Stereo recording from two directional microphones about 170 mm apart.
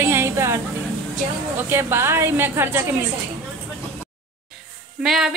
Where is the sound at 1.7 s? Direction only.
15° right (ahead or behind).